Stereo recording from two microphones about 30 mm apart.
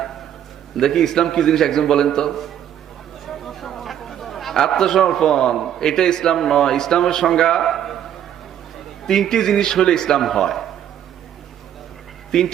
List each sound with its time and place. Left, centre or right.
0.8 s a man's voice: centre
3.2 s chatter: centre
5.0 s a man's voice: centre
5.5 s a man's voice: centre
5.8 s a man's voice: centre
7.7 s a sound: centre
9.1 s speech: centre
10.2 s a man's voice: centre
12.3 s speech: left